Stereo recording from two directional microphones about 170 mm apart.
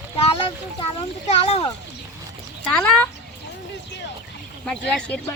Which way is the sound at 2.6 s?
5° left (ahead or behind).